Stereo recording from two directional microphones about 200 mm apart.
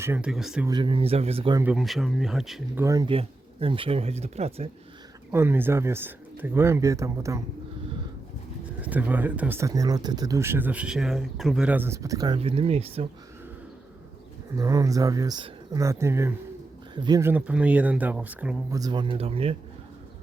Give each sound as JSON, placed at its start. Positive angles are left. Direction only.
{"t": 0.0, "sound": "speech", "side_deg": -10}
{"t": 0.7, "sound": "speech", "side_deg": -25}
{"t": 1.5, "sound": "speech", "side_deg": -5}
{"t": 2.8, "sound": "speech", "side_deg": -15}
{"t": 5.3, "sound": "speech", "side_deg": -10}
{"t": 8.8, "sound": "speech", "side_deg": -10}
{"t": 14.5, "sound": "speech", "side_deg": -15}
{"t": 18.8, "sound": "speech", "side_deg": -20}